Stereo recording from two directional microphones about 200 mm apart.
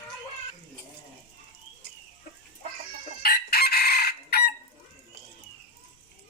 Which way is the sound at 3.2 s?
50° left (ahead or behind).